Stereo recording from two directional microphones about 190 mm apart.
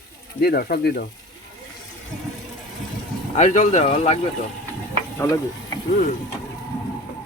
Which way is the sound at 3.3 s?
40° left (ahead or behind).